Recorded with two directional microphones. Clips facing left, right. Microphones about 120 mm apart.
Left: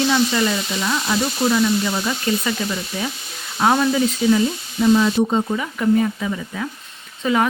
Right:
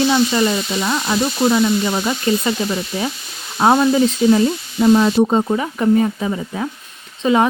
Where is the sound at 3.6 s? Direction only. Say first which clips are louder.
Right 4 dB; 25° right (ahead or behind).